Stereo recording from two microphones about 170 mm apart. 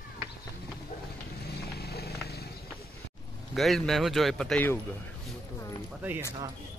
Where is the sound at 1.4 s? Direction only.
70° left (ahead or behind).